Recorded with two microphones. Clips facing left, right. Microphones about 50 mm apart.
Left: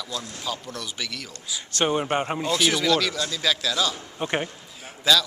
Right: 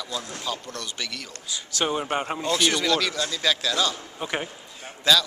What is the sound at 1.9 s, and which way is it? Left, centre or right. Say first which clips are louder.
A man's voice: left 3 dB; centre.